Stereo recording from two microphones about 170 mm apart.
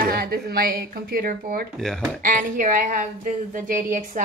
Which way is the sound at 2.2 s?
50° right (ahead or behind).